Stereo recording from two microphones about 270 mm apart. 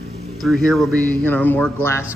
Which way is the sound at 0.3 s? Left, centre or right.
Centre.